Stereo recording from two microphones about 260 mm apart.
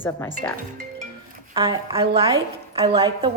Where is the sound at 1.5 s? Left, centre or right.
Centre.